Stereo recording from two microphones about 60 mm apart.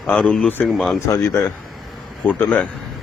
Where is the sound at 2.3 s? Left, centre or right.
Left.